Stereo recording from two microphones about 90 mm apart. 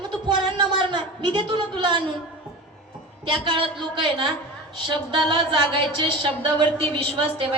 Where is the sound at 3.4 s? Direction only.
70° right (ahead or behind).